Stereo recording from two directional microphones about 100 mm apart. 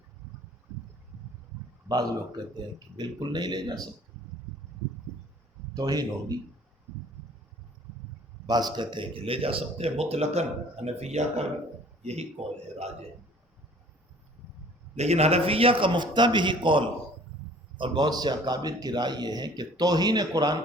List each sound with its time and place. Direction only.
1.9 s a man's voice: 40° right (ahead or behind)
5.7 s a man's voice: 40° right (ahead or behind)
8.4 s speech: 45° right (ahead or behind); by 12.3 s 90° right
14.9 s a man's voice: 90° right; by 20.6 s 45° right (ahead or behind)